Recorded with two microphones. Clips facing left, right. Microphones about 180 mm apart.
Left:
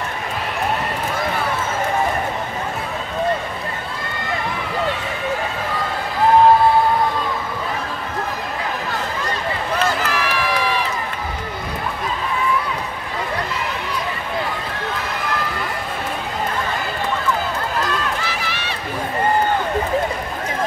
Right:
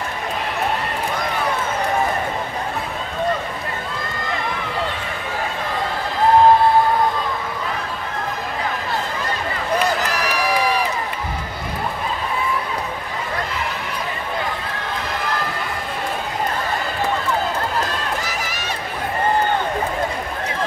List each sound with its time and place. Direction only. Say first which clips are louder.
10.1 s run: right 1 dB; 40° right (ahead or behind)
18.2 s run: left 1 dB; 40° right (ahead or behind)